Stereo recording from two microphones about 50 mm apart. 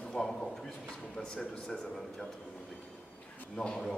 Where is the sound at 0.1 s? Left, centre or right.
Centre.